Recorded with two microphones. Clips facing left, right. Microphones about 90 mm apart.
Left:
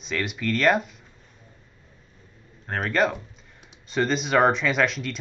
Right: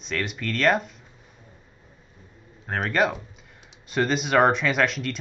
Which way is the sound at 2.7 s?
Centre (ahead or behind).